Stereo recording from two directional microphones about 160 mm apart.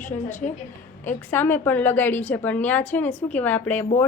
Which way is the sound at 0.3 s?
50° left (ahead or behind).